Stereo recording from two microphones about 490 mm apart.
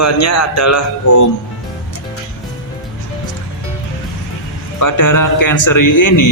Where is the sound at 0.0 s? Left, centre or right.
Left.